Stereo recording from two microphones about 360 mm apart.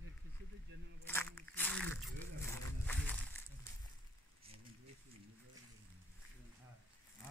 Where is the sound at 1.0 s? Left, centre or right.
Centre.